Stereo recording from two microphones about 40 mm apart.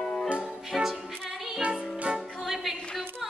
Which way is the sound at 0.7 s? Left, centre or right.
Centre.